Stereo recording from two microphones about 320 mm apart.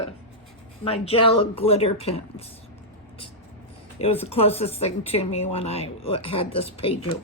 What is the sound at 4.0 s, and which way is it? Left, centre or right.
Speech, centre.